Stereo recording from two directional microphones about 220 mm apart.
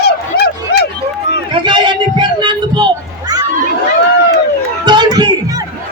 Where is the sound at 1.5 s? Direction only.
20° right (ahead or behind).